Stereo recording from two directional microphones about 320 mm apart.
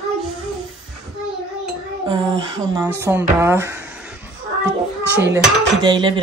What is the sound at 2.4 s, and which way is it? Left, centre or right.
Speech, centre.